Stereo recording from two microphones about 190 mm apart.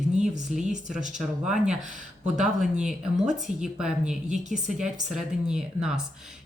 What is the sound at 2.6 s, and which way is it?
A woman's voice, 5° right (ahead or behind).